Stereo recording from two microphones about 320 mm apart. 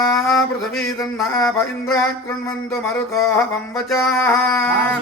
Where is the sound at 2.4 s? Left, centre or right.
Centre.